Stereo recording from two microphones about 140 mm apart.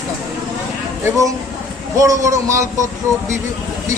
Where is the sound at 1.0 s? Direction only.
25° right (ahead or behind).